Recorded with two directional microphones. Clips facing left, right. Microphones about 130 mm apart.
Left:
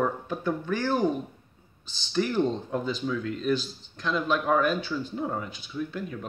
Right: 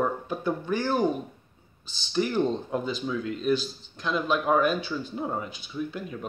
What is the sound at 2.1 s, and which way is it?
Speech, 15° right (ahead or behind).